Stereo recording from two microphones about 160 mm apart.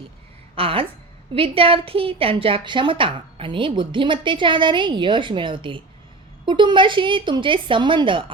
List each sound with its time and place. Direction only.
0.5 s a woman's voice: 35° right (ahead or behind)